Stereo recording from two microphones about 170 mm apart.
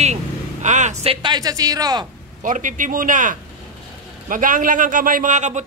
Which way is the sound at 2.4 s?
50° right (ahead or behind).